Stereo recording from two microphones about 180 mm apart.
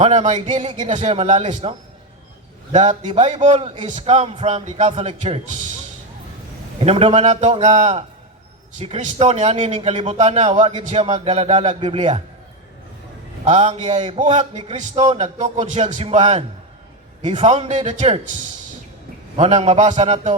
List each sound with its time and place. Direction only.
0.0 s a man's voice: 40° right (ahead or behind)
2.7 s a man's voice: 40° right (ahead or behind)
6.7 s a man's voice: 35° right (ahead or behind)
13.4 s a man's voice: 40° right (ahead or behind)
19.4 s a man's voice: 40° right (ahead or behind)